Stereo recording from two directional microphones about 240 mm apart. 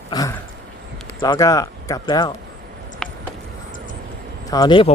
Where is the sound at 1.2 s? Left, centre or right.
Centre.